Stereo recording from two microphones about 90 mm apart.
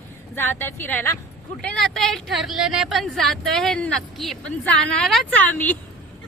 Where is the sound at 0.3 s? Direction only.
25° left (ahead or behind).